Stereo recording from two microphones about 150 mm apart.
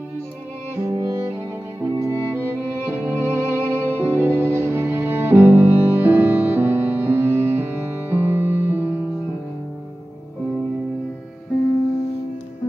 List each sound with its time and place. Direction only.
0.7 s music: 20° right (ahead or behind)